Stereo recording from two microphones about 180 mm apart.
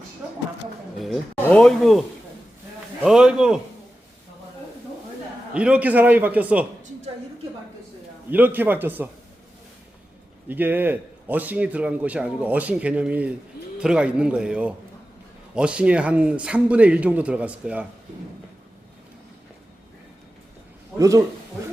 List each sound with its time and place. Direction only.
0.9 s speech: centre (ahead or behind)
5.5 s a man's voice: 5° right (ahead or behind)
8.3 s a man's voice: 10° right (ahead or behind)
10.5 s a man's voice: 10° right (ahead or behind)
21.0 s a man's voice: 20° right (ahead or behind)